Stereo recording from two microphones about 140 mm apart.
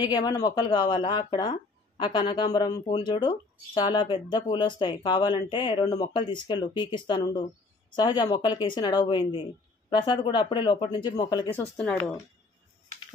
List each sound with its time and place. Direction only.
0.0 s speech: 30° left (ahead or behind)
11.7 s speech: 10° left (ahead or behind)